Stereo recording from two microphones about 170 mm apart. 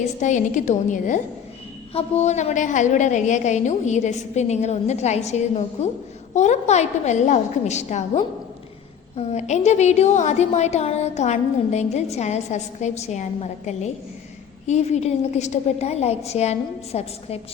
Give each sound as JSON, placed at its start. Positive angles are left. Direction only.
{"t": 0.2, "sound": "a woman's voice", "side_deg": 45}
{"t": 1.9, "sound": "a woman's voice", "side_deg": 35}